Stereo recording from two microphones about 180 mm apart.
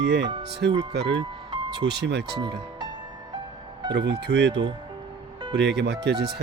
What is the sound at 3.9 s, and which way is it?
Speech, 75° right (ahead or behind).